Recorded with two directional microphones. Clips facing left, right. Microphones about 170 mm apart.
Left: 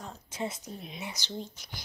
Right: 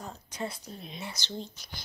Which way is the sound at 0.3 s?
20° left (ahead or behind).